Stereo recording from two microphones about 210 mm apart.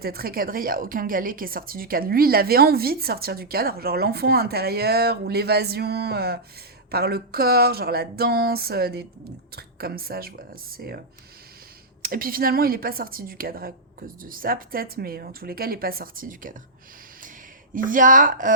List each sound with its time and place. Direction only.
0.0 s a woman's voice: 45° right (ahead or behind)
12.0 s a woman's voice: 45° right (ahead or behind)
17.8 s a woman's voice: 40° right (ahead or behind)